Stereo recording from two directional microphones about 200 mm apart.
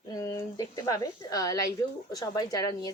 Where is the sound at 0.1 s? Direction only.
15° left (ahead or behind).